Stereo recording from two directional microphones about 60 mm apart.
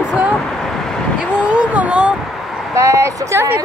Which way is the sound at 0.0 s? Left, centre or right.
Centre.